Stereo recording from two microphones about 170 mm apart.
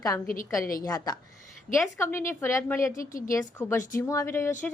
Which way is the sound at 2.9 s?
55° left (ahead or behind).